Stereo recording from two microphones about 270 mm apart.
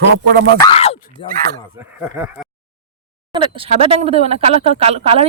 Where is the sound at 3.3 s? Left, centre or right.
Centre.